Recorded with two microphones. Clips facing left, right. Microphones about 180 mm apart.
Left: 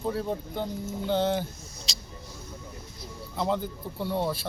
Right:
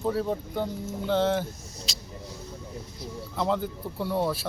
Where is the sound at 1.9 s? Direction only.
Centre (ahead or behind).